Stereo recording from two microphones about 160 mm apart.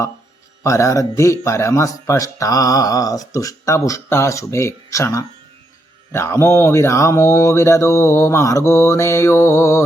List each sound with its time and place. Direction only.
0.6 s speech: 20° left (ahead or behind)